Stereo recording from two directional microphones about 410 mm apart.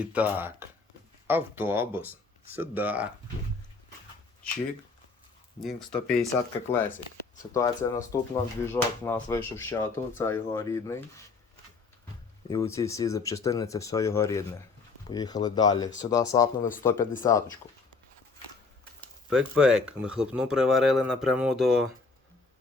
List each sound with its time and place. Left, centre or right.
0.0 s speech: centre
5.5 s speech: centre
7.8 s speech: centre
8.1 s speech: centre
12.5 s speech: centre
18.9 s speech: centre